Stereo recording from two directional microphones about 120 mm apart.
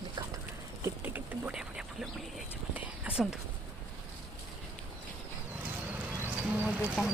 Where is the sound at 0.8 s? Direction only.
15° right (ahead or behind).